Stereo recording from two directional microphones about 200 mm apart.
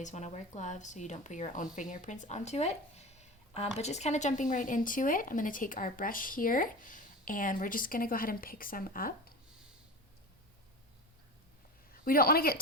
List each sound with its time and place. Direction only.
0.0 s a woman's voice: 35° left (ahead or behind)
11.9 s a woman's voice: 45° left (ahead or behind)